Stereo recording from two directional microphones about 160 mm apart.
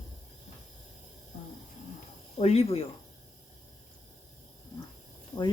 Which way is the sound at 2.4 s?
40° left (ahead or behind).